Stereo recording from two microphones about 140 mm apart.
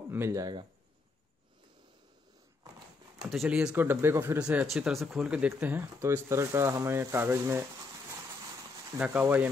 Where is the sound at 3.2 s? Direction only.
Centre (ahead or behind).